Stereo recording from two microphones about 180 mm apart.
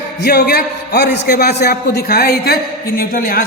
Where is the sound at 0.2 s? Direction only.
60° left (ahead or behind).